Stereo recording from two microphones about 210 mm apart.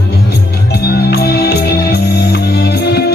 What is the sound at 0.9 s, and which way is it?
Music, 50° left (ahead or behind).